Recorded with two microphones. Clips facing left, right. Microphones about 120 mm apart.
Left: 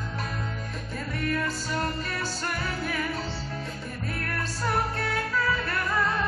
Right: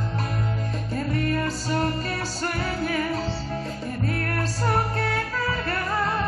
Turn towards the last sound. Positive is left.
turn(degrees=-40)  # may be behind; listen again after turning